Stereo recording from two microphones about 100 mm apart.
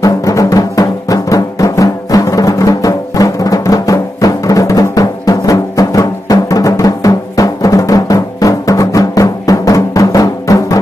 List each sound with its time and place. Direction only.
0.0 s music: 35° left (ahead or behind)